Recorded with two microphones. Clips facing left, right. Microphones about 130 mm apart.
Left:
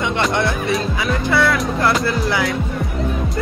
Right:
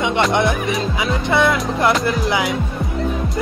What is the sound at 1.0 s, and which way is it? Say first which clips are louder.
Speech: right 1 dB; 20° right (ahead or behind).